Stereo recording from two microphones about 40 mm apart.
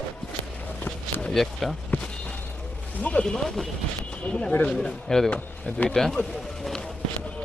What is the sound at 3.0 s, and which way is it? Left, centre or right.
Speech, left.